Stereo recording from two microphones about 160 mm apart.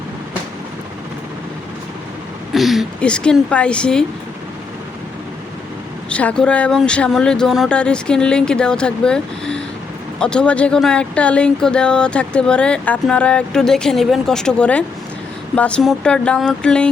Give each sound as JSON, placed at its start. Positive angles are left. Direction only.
{"t": 2.5, "sound": "speech", "side_deg": 0}
{"t": 6.1, "sound": "speech", "side_deg": 5}